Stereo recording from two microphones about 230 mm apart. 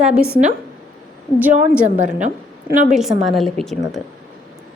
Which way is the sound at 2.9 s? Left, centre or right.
Centre.